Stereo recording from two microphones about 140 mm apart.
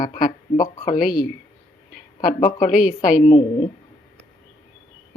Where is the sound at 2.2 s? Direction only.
65° left (ahead or behind).